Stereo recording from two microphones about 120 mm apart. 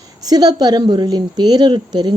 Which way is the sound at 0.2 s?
35° right (ahead or behind).